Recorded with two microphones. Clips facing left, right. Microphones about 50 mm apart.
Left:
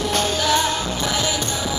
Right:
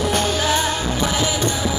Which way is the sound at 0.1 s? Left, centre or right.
Right.